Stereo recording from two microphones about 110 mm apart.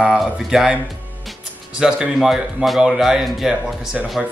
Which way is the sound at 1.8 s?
5° right (ahead or behind).